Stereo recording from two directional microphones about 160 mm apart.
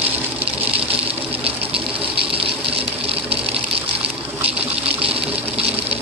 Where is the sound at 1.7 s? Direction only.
35° right (ahead or behind).